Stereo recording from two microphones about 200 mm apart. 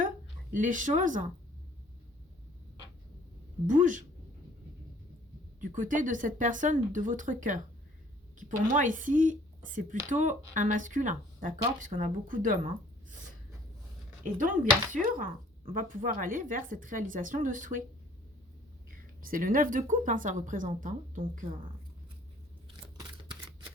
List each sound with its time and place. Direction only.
0.5 s speech: 40° right (ahead or behind)
3.7 s speech: 40° right (ahead or behind)
5.5 s speech: 40° right (ahead or behind)
14.3 s speech: 40° right (ahead or behind)
18.9 s speech: 45° right (ahead or behind)
23.0 s a sound: 25° right (ahead or behind)